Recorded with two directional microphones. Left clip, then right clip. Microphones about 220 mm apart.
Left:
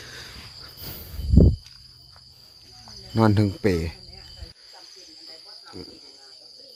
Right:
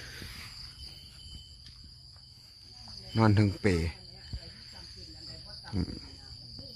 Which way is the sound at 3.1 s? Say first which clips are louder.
Left 6 dB; 15° left (ahead or behind).